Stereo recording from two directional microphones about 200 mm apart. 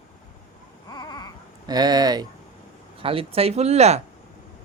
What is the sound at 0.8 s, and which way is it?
Baby cry, 20° left (ahead or behind).